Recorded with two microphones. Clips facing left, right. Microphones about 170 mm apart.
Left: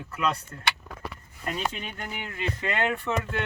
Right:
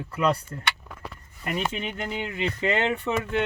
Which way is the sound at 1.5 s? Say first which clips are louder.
Right 4 dB; 20° right (ahead or behind).